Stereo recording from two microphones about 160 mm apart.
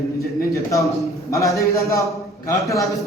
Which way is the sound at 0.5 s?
20° left (ahead or behind).